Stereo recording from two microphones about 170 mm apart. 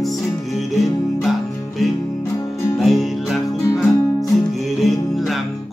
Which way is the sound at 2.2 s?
15° left (ahead or behind).